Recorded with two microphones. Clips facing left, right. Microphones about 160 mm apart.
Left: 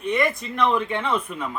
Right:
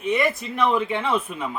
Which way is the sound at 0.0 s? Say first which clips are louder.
Right 1 dB; 5° right (ahead or behind).